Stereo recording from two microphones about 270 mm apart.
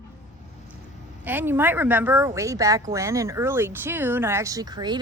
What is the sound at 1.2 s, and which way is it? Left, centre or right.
A woman's voice, centre.